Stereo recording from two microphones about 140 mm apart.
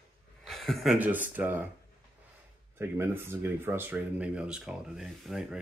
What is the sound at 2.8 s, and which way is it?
Speech, 15° right (ahead or behind).